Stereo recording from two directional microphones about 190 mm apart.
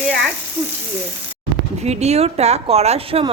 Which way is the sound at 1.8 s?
35° right (ahead or behind).